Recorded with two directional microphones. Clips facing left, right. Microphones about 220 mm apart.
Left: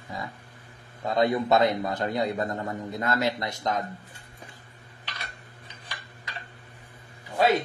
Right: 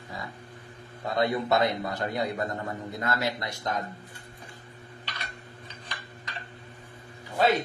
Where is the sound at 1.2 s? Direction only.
20° left (ahead or behind).